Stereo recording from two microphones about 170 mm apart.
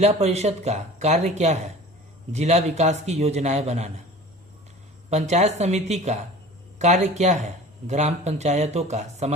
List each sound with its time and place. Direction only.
0.0 s speech: 40° right (ahead or behind)
5.1 s speech: 40° right (ahead or behind)